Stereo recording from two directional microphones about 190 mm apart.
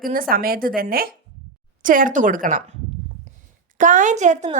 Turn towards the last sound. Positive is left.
turn(degrees=-40)  # may be behind; listen again after turning